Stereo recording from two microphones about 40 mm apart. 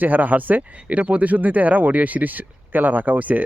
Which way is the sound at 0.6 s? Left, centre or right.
Right.